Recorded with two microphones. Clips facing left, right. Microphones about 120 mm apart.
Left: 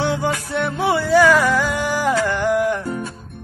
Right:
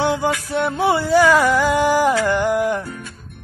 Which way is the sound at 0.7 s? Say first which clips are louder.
Even; 25° right (ahead or behind).